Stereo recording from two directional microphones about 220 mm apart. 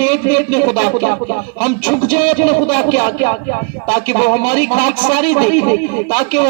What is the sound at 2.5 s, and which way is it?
A man's voice, 50° left (ahead or behind).